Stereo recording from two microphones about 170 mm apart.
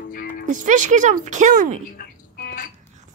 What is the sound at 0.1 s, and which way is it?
Music, 60° left (ahead or behind).